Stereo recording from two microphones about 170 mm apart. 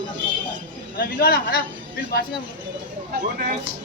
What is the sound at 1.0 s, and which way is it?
Speech, 65° left (ahead or behind).